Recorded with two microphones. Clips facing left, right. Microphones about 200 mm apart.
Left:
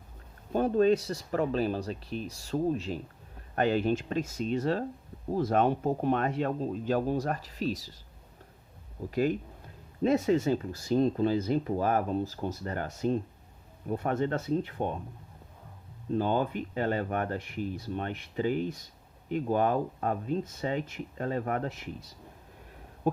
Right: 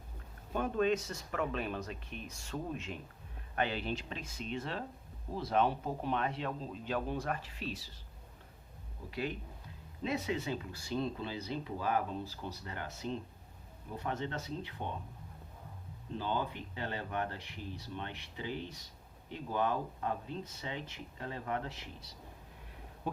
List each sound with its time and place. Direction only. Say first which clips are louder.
0.5 s speech: left 8 dB; 35° left (ahead or behind)
9.0 s speech: left 10 dB; 45° left (ahead or behind)
16.1 s speech: left 9 dB; 50° left (ahead or behind)
23.1 s a sound: left 10 dB; 45° left (ahead or behind)